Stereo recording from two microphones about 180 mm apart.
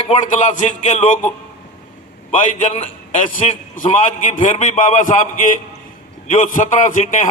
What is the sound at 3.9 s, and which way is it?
A man's voice, 45° left (ahead or behind).